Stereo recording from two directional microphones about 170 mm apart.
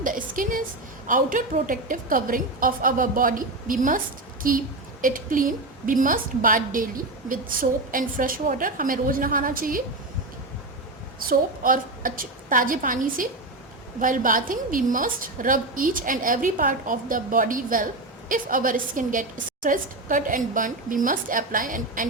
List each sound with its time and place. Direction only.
0.0 s a sound: 50° right (ahead or behind)
1.0 s a woman's voice: 50° right (ahead or behind)
11.3 s a woman's voice: 55° right (ahead or behind)